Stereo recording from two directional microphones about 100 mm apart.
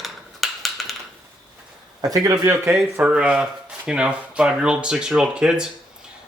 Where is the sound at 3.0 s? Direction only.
10° right (ahead or behind).